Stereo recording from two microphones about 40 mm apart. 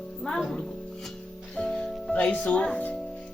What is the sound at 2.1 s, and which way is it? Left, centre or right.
Speech, left.